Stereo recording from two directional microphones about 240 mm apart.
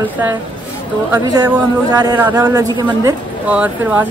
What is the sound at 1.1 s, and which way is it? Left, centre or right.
A man's voice, centre.